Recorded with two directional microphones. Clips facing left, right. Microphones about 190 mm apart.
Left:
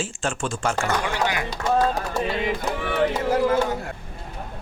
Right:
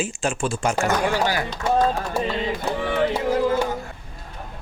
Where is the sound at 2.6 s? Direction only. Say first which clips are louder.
Right 1 dB; 15° right (ahead or behind).